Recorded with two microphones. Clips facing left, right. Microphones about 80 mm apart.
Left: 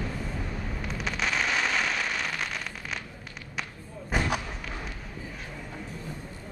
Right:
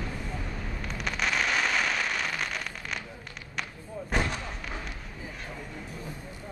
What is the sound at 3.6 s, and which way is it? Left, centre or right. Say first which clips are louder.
Thump: right 2 dB; centre.